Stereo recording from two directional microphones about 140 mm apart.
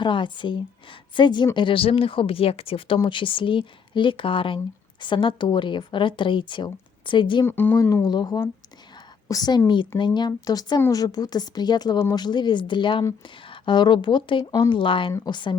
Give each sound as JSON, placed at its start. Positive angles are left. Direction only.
{"t": 0.0, "sound": "speech", "side_deg": 35}
{"t": 7.4, "sound": "speech", "side_deg": 15}